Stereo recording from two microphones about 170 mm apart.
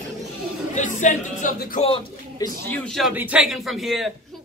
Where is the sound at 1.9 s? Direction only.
25° left (ahead or behind).